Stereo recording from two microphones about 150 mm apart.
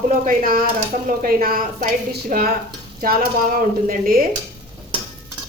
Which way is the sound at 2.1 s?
90° right.